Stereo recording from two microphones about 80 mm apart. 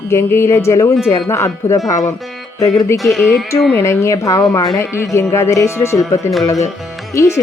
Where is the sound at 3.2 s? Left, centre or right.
Left.